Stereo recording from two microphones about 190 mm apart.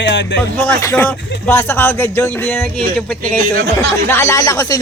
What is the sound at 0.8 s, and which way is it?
Speech, 10° left (ahead or behind).